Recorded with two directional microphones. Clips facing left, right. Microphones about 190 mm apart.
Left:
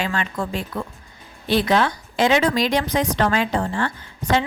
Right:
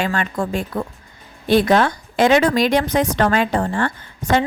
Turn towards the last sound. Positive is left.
turn(degrees=-50)  # may be behind; listen again after turning